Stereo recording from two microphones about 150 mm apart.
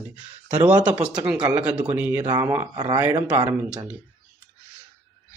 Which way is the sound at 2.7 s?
25° right (ahead or behind).